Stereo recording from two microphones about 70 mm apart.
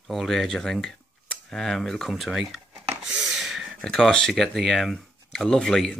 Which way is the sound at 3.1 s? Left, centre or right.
Centre.